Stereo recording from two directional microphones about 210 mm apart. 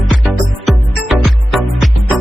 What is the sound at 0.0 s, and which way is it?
Music, centre (ahead or behind).